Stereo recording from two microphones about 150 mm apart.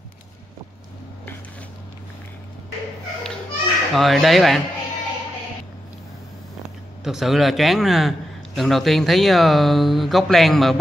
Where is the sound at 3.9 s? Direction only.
Centre (ahead or behind).